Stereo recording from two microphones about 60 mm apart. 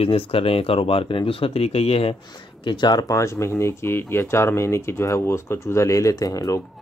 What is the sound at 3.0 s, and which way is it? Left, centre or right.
Speech, left.